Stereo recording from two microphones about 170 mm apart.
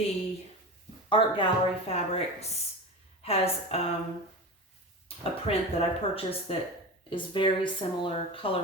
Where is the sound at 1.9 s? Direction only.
35° left (ahead or behind).